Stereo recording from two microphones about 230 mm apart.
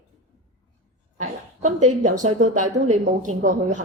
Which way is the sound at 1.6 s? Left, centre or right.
Right.